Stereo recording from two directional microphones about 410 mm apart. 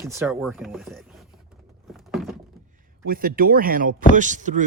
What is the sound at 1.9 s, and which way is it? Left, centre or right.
Thunk, centre.